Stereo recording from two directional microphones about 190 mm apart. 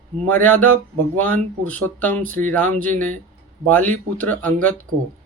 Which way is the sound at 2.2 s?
45° right (ahead or behind).